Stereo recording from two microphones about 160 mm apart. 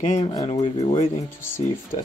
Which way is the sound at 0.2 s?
25° left (ahead or behind).